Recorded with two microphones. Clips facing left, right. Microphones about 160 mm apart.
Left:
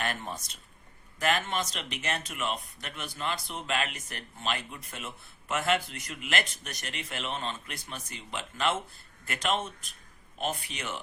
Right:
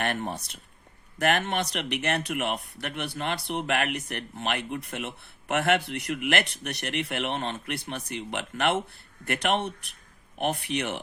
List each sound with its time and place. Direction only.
0.0 s speech: 60° right (ahead or behind)